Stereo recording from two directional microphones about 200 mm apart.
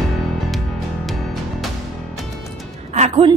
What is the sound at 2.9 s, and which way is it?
Music, 35° right (ahead or behind).